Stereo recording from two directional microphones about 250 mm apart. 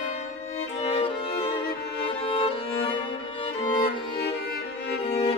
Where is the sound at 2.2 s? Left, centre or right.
Left.